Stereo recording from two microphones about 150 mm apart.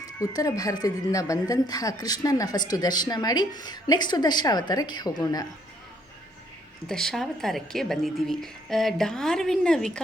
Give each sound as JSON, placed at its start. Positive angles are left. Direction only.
{"t": 0.2, "sound": "speech", "side_deg": 25}
{"t": 6.8, "sound": "a woman's voice", "side_deg": 5}